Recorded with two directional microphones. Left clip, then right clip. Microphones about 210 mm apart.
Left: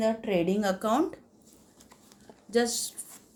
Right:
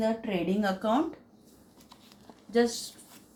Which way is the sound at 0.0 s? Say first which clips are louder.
Left 3 dB; 60° left (ahead or behind).